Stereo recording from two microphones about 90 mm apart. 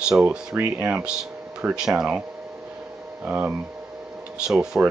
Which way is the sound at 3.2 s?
15° right (ahead or behind).